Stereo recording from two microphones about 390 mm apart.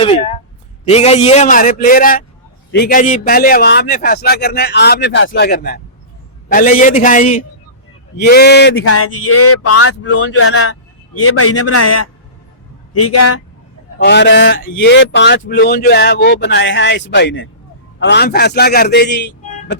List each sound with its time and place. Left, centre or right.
0.9 s speech: centre; by 12.0 s left
13.1 s speech: left
14.0 s speech: left